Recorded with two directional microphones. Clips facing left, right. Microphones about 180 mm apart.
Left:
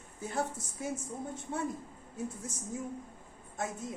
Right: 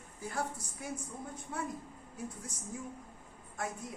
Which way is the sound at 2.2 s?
25° left (ahead or behind).